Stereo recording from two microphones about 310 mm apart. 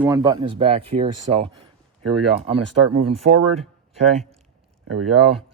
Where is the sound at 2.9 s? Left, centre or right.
Centre.